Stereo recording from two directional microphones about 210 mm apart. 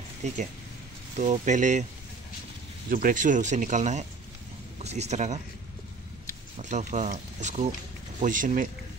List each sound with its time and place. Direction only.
1.1 s speech: 35° right (ahead or behind)
2.9 s speech: 40° right (ahead or behind)
6.6 s speech: 35° right (ahead or behind)